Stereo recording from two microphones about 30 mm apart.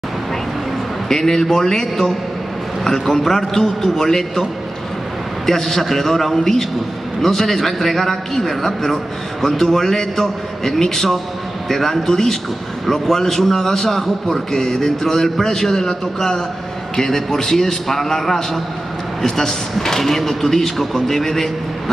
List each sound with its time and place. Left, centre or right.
1.0 s a man's voice: centre
5.5 s a man's voice: centre